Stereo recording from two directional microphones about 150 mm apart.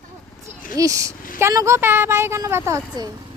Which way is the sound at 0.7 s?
20° right (ahead or behind).